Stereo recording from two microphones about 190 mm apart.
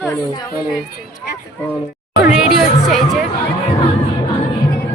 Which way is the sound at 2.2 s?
5° right (ahead or behind).